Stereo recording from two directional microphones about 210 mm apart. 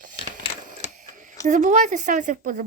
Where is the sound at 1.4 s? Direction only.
35° right (ahead or behind).